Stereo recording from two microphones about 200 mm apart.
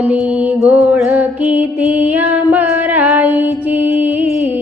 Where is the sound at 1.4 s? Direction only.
5° right (ahead or behind).